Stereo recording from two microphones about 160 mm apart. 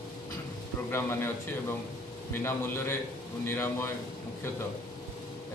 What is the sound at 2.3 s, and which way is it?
A man's voice, 15° left (ahead or behind).